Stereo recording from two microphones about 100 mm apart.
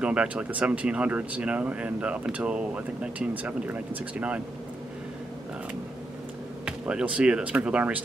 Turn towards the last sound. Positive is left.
turn(degrees=-10)  # may be behind; listen again after turning